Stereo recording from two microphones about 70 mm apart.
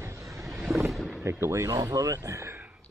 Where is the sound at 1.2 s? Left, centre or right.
Right.